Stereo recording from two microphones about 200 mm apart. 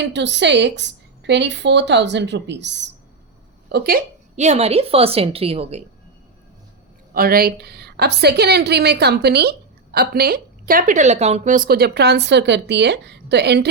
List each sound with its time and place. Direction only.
0.0 s a woman's voice: 60° right (ahead or behind)
4.4 s a woman's voice: 30° right (ahead or behind)
7.1 s a woman's voice: 45° right (ahead or behind)